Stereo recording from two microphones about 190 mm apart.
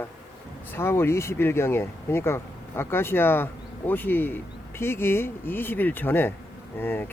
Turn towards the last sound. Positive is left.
turn(degrees=10)  # may be behind; listen again after turning